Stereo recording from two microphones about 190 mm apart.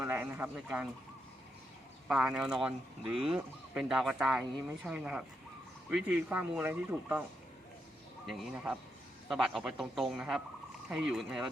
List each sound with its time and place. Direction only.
0.0 s speech: 10° right (ahead or behind)
2.0 s speech: 5° right (ahead or behind)
8.3 s speech: centre (ahead or behind)